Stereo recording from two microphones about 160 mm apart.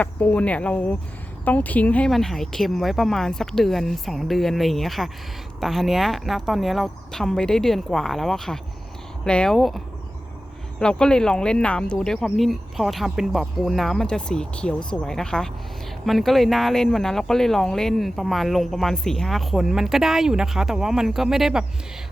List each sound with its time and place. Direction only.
0.0 s speech: 10° left (ahead or behind)